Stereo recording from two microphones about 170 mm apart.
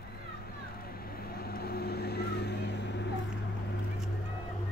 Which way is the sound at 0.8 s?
65° left (ahead or behind).